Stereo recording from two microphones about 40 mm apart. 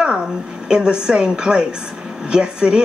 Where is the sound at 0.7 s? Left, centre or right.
Right.